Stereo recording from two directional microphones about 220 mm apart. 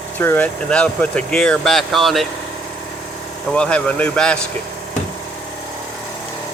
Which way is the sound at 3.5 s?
5° left (ahead or behind).